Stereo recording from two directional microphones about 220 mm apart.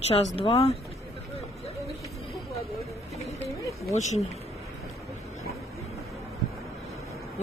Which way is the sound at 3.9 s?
30° left (ahead or behind).